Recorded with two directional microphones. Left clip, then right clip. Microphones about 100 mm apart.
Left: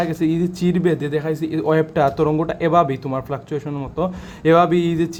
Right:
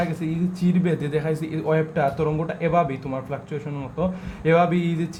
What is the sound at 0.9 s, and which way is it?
Speech, 20° left (ahead or behind).